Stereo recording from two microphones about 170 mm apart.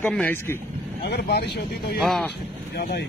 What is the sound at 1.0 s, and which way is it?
Speech, 75° left (ahead or behind).